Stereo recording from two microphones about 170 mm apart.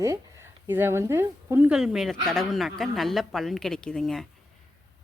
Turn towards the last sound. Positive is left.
turn(degrees=0)  # may be behind; listen again after turning